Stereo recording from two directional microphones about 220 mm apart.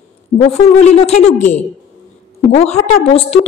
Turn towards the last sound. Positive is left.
turn(degrees=25)  # may be behind; listen again after turning